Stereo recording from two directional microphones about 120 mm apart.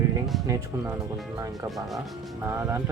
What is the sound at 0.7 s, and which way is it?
Speech, 20° right (ahead or behind).